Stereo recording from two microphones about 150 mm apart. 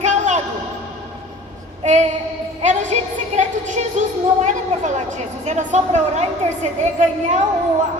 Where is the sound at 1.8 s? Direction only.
50° right (ahead or behind).